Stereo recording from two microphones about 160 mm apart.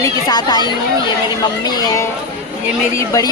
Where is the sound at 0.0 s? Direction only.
25° left (ahead or behind).